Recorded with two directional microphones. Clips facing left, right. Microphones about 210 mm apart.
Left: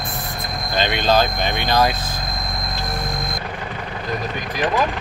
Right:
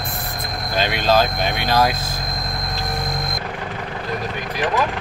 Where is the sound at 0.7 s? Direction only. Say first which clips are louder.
Even; 5° right (ahead or behind).